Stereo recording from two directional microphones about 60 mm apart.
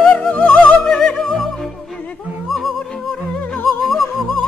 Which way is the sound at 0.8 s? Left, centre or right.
Centre.